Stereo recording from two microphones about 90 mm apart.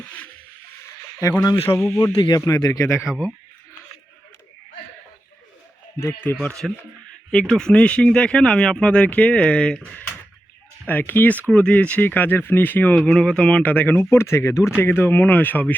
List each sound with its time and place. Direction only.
0.0 s a sound: 15° left (ahead or behind)
1.2 s speech: 35° left (ahead or behind)
1.6 s speech: 25° left (ahead or behind)
2.1 s speech: 55° left (ahead or behind)
2.4 s speech: 45° left (ahead or behind)
3.1 s speech: 10° right (ahead or behind)
6.0 s speech: 30° left (ahead or behind)
6.3 s speech: 5° left (ahead or behind)
10.8 s speech: 20° left (ahead or behind)
13.0 s speech: 10° left (ahead or behind)